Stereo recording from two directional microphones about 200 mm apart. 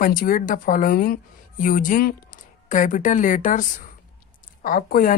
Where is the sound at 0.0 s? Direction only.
45° left (ahead or behind).